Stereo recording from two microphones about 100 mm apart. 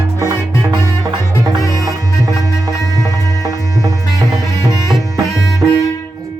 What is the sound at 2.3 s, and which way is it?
Music, 30° left (ahead or behind).